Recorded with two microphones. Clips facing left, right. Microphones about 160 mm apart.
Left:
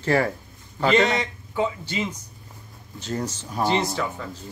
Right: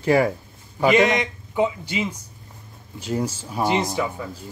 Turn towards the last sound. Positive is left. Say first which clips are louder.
# right 3 dB
turn(degrees=-10)  # may be behind; listen again after turning